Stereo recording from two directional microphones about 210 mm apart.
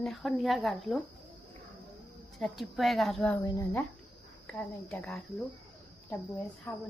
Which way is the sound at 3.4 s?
15° left (ahead or behind).